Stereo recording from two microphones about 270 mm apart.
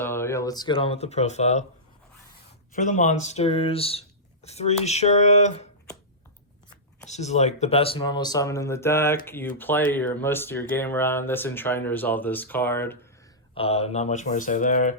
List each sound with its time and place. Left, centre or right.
0.0 s speech: centre; by 1.6 s left
2.7 s speech: left
7.0 s speech: left; by 13.0 s centre
13.5 s speech: left